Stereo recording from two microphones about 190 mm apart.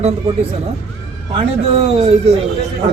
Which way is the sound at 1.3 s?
30° right (ahead or behind).